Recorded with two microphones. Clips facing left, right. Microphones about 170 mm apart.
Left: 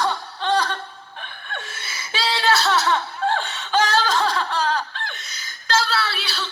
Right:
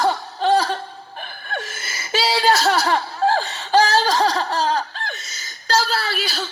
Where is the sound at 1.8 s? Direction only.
Centre (ahead or behind).